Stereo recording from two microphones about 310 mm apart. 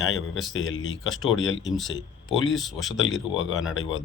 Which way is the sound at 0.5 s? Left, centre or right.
Left.